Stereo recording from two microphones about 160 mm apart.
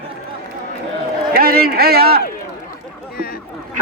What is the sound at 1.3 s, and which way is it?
Speech, 70° right (ahead or behind).